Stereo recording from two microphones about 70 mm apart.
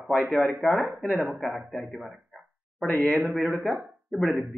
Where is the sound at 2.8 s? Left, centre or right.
Left.